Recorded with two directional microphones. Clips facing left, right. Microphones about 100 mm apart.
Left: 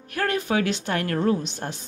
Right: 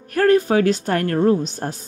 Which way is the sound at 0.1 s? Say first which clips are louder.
Right 9 dB; 40° right (ahead or behind).